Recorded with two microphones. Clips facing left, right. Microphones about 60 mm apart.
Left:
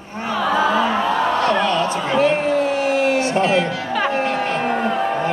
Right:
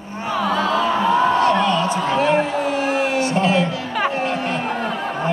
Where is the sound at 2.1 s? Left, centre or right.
Left.